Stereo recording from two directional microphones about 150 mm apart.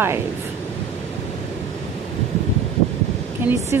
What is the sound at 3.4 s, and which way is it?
Speech, 15° right (ahead or behind).